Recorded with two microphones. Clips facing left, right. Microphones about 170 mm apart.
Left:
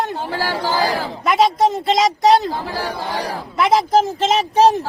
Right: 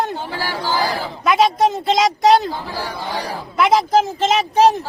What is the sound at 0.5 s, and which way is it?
Speech, 30° left (ahead or behind).